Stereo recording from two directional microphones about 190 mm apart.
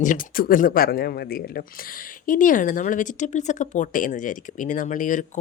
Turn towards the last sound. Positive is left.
turn(degrees=40)  # may be behind; listen again after turning